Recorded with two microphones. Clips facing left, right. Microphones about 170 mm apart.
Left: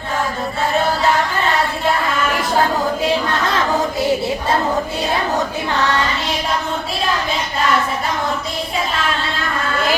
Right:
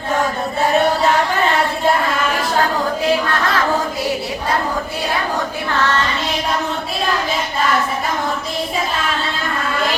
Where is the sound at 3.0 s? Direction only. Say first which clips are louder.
Right 1 dB; 20° left (ahead or behind).